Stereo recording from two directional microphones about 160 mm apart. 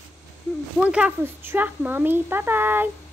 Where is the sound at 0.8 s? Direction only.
5° right (ahead or behind).